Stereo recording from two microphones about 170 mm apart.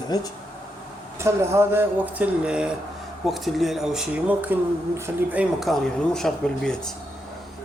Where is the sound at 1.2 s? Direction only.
15° right (ahead or behind).